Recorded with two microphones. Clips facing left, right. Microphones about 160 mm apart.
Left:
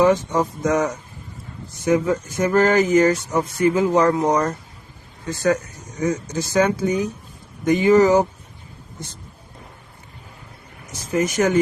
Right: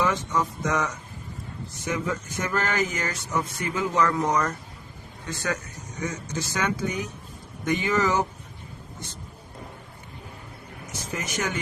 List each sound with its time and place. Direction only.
0.0 s speech: 35° left (ahead or behind)
11.1 s speech: 40° left (ahead or behind)